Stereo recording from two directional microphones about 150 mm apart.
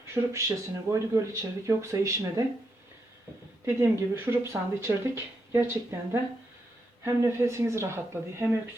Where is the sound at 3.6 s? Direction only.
15° right (ahead or behind).